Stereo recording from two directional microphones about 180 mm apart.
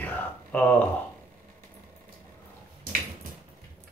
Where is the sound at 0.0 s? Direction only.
10° left (ahead or behind).